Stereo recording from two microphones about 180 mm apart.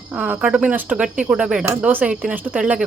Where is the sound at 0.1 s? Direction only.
5° right (ahead or behind).